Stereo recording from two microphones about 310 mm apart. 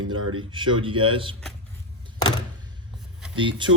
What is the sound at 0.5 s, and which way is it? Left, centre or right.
Speech, centre.